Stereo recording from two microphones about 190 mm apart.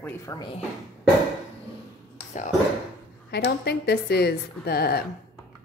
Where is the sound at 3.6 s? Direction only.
60° left (ahead or behind).